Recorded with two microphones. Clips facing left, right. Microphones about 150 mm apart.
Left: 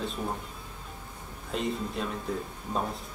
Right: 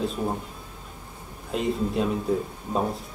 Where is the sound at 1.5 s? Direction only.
Centre (ahead or behind).